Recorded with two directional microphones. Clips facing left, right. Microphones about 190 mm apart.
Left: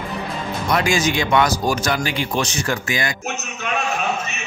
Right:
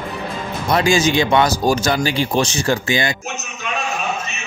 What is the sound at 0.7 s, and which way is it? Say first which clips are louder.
Speech: right 4 dB; 30° right (ahead or behind).